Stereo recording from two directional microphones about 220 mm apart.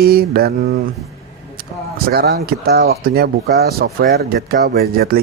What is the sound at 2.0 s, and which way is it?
Speech, 45° right (ahead or behind).